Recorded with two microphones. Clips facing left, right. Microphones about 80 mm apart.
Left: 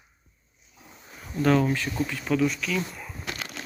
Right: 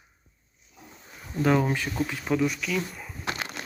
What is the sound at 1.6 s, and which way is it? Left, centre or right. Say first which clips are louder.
Speech: left 1 dB; right.